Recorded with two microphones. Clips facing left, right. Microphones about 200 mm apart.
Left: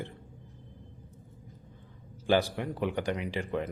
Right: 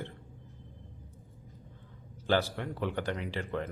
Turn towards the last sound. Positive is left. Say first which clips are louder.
# left 3 dB
turn(degrees=15)  # may be behind; listen again after turning